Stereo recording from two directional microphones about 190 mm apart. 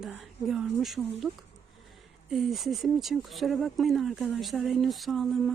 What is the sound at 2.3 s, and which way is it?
Speech, centre (ahead or behind).